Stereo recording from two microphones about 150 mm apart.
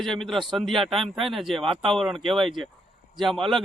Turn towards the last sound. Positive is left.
turn(degrees=0)  # may be behind; listen again after turning